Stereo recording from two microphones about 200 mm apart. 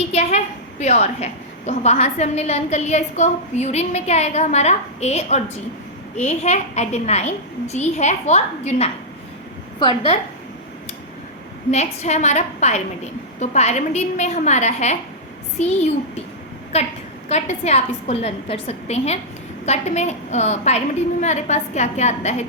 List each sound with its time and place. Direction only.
0.1 s a woman's voice: 35° left (ahead or behind)
11.7 s a woman's voice: 35° left (ahead or behind)
16.7 s a woman's voice: 30° left (ahead or behind)